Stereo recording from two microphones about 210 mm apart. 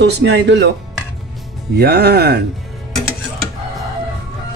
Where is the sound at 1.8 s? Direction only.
45° right (ahead or behind).